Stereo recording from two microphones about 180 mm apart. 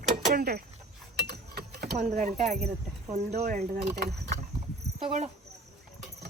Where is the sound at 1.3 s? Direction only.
60° right (ahead or behind).